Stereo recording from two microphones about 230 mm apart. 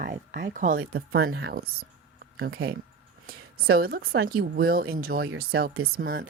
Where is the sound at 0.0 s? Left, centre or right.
Right.